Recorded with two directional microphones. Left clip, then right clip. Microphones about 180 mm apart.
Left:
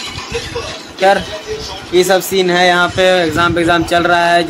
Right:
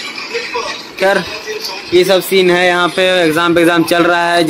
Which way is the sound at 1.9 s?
10° right (ahead or behind).